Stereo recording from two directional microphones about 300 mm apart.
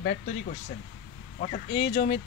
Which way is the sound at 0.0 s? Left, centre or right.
Left.